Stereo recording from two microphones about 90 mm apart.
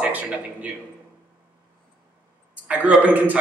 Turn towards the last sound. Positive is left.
turn(degrees=-20)  # may be behind; listen again after turning